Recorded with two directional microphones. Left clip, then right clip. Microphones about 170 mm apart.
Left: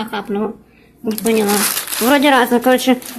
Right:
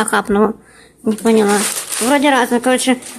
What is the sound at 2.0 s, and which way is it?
Speech, centre (ahead or behind).